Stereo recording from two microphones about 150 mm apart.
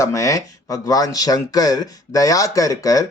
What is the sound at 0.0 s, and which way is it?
Speech, 20° left (ahead or behind).